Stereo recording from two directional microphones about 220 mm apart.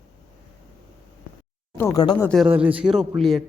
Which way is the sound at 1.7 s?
15° left (ahead or behind).